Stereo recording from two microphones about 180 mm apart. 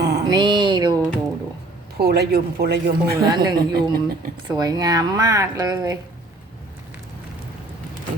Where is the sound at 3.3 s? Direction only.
20° right (ahead or behind).